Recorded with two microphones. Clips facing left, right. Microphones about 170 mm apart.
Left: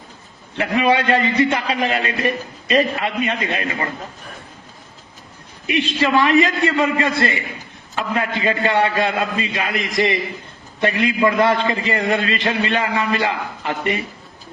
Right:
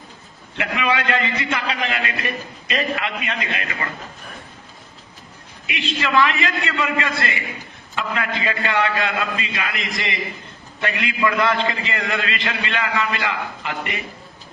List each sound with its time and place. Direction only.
0.5 s a man's voice: 35° left (ahead or behind)
5.6 s a man's voice: 35° left (ahead or behind)